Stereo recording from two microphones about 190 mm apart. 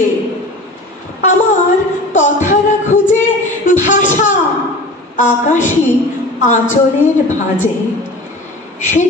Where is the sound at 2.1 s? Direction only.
40° left (ahead or behind).